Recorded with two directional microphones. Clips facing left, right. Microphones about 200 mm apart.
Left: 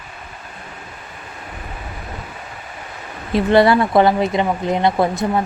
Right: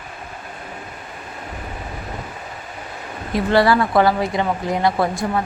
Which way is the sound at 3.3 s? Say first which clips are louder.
Left 3 dB; 20° left (ahead or behind).